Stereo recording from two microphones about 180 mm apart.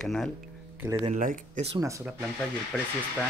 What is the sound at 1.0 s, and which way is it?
Speech, 45° right (ahead or behind).